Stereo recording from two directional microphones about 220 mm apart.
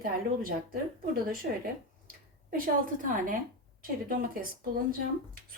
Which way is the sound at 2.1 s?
40° right (ahead or behind).